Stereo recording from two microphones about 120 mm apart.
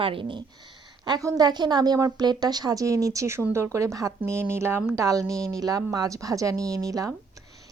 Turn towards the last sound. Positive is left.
turn(degrees=-30)  # may be behind; listen again after turning